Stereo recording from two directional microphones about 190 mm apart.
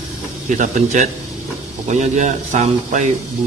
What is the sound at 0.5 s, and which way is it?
Speech, 40° right (ahead or behind).